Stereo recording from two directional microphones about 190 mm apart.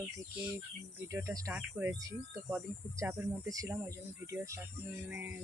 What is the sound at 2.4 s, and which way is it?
Speech, 15° right (ahead or behind).